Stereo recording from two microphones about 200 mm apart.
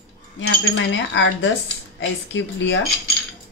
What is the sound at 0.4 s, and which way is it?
Speech, 65° left (ahead or behind).